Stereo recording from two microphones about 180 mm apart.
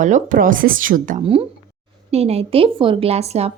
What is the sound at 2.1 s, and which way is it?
A woman's voice, 35° right (ahead or behind).